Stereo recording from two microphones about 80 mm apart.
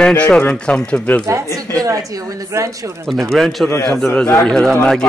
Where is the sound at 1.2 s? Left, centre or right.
Right.